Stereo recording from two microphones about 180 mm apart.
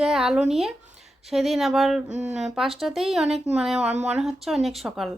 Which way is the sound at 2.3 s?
40° right (ahead or behind).